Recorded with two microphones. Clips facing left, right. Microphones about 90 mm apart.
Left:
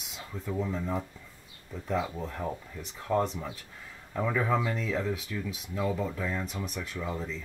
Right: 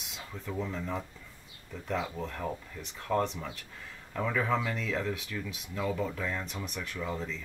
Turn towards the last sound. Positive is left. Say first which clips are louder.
# left 1 dB
turn(degrees=5)  # may be behind; listen again after turning